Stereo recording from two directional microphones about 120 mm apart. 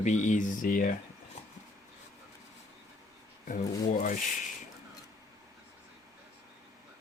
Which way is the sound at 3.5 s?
90° left.